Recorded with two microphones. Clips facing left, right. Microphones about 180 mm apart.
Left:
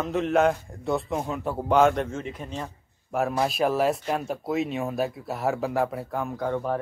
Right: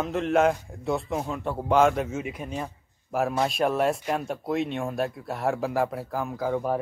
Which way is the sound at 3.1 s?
Centre (ahead or behind).